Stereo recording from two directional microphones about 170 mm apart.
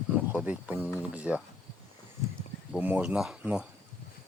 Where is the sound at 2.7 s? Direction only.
10° right (ahead or behind).